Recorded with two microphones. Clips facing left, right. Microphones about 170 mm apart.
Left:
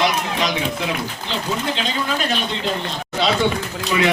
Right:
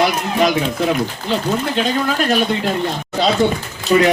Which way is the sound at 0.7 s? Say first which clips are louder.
Right 7 dB; 45° right (ahead or behind).